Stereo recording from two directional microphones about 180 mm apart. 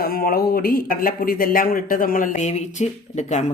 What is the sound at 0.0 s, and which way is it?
Speech, 55° left (ahead or behind).